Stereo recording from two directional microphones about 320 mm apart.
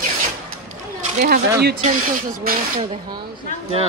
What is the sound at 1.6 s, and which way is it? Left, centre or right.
Speech, right.